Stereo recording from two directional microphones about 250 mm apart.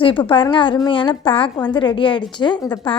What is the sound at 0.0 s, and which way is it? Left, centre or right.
A woman's voice, centre.